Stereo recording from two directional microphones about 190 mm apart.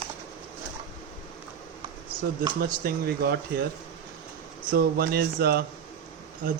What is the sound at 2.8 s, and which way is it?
Speech, 55° right (ahead or behind).